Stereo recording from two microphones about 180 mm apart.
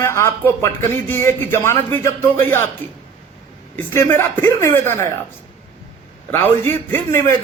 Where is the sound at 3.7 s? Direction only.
15° left (ahead or behind).